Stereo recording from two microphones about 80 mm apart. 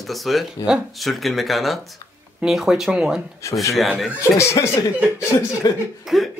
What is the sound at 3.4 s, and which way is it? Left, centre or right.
Speech, left.